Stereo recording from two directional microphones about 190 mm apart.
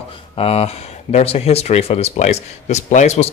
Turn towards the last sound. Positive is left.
turn(degrees=35)  # may be behind; listen again after turning